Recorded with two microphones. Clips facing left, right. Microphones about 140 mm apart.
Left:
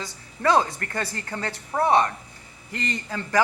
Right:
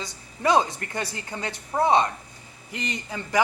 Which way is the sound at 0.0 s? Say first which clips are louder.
Left 1 dB; 20° right (ahead or behind).